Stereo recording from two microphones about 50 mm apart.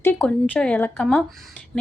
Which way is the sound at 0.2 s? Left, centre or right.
Left.